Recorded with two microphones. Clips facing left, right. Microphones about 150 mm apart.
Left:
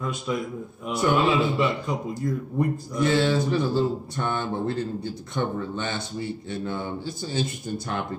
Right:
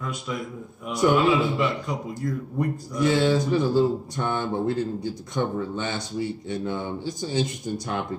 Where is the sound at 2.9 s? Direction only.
15° right (ahead or behind).